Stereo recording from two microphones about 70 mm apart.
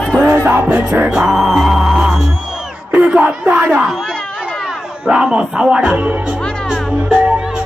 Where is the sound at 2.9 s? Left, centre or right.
Centre.